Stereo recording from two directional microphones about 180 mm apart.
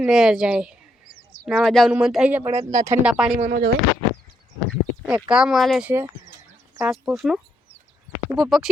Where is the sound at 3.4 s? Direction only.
50° right (ahead or behind).